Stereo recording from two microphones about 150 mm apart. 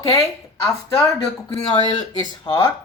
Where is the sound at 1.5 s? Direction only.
30° left (ahead or behind).